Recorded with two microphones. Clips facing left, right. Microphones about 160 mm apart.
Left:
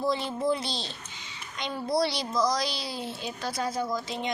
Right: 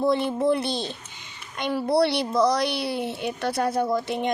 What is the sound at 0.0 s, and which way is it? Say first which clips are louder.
A woman's voice: right 6 dB; 55° right (ahead or behind).